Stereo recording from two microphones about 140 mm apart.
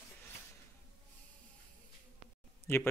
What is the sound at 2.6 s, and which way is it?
Speech, 15° left (ahead or behind).